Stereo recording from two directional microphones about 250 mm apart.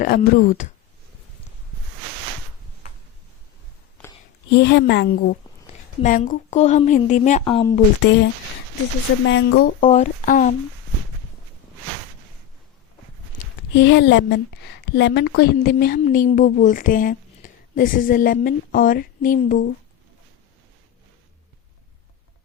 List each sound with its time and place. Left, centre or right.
0.0 s a woman's voice: left
4.4 s a woman's voice: left; by 7.8 s centre
9.2 s a woman's voice: left
13.7 s a woman's voice: left